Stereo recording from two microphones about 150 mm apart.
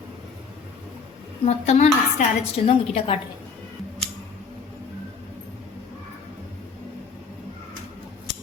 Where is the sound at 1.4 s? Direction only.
45° left (ahead or behind).